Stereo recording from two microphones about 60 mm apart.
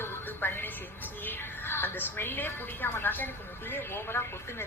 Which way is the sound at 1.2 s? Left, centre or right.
Left.